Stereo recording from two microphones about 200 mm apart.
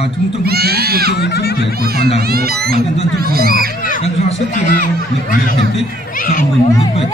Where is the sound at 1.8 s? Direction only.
50° right (ahead or behind).